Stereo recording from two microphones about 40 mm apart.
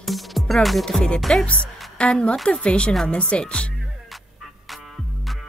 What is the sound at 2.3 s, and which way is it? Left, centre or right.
Speech, centre.